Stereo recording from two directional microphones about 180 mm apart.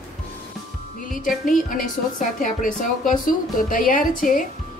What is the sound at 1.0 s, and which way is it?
Music, 50° left (ahead or behind).